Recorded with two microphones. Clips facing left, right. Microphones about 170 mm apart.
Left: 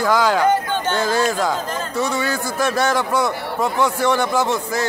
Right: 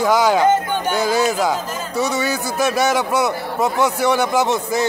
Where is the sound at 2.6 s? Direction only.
15° right (ahead or behind).